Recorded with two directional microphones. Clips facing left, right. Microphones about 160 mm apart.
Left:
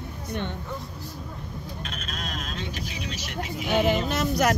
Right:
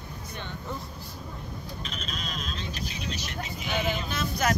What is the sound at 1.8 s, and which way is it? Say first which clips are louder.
Speech: even; 55° left (ahead or behind).